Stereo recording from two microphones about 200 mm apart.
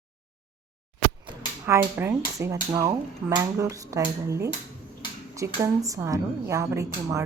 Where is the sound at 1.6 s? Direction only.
10° right (ahead or behind).